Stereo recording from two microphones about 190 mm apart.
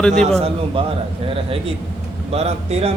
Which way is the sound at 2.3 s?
35° right (ahead or behind).